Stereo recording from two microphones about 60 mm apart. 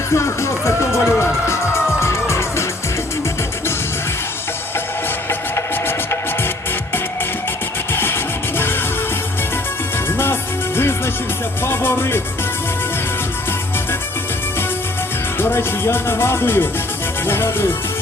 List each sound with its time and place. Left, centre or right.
0.1 s speech: left
2.0 s music: left
5.3 s music: left
7.9 s music: left
10.8 s music: left
15.4 s music: left